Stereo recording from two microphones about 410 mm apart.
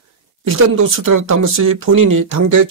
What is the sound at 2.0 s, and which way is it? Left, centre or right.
Speech, right.